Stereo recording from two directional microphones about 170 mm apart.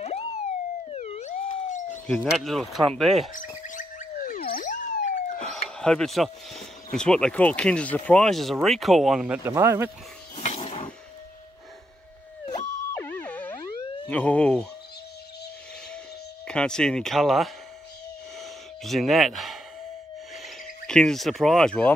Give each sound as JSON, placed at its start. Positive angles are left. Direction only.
{"t": 0.8, "sound": "police car", "side_deg": 40}
{"t": 2.0, "sound": "speech", "side_deg": 5}
{"t": 3.6, "sound": "police car", "side_deg": 50}
{"t": 5.3, "sound": "a sound", "side_deg": 5}
{"t": 5.8, "sound": "speech", "side_deg": 5}
{"t": 9.4, "sound": "speech", "side_deg": -15}
{"t": 10.4, "sound": "a sound", "side_deg": 35}
{"t": 12.9, "sound": "music", "side_deg": 10}
{"t": 14.0, "sound": "speech", "side_deg": 10}
{"t": 16.4, "sound": "speech", "side_deg": 5}
{"t": 18.4, "sound": "sigh", "side_deg": 0}
{"t": 20.4, "sound": "speech", "side_deg": 5}